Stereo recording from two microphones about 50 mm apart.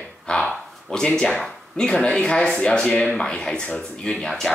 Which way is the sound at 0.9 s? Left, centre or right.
Centre.